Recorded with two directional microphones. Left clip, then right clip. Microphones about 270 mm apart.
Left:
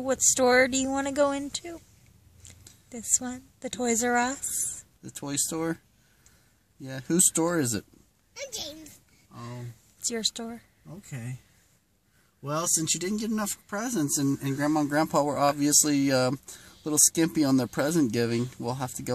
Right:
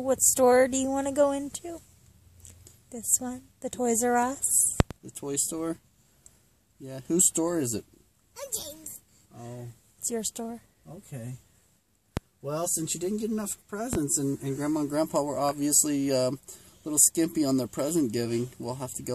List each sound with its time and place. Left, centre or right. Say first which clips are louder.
0.0 s speech: right 1 dB; centre
5.1 s speech: left 1 dB; left
6.8 s speech: even; left
10.0 s speech: left 3 dB; centre
12.4 s speech: left 3 dB; left